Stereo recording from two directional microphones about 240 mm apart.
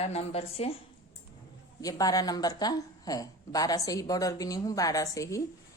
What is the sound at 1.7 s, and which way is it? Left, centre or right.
A woman's voice, centre.